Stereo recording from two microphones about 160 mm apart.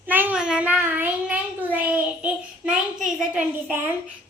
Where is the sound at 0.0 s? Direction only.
10° right (ahead or behind).